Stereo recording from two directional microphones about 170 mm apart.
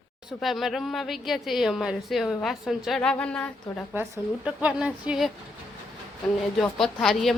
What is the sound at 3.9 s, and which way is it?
Speech, 15° right (ahead or behind).